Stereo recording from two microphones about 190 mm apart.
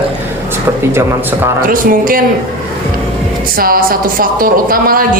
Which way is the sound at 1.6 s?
45° right (ahead or behind).